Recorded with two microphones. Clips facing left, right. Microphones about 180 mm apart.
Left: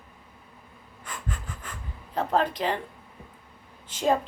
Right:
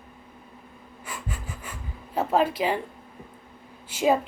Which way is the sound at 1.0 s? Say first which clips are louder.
Even; 10° right (ahead or behind).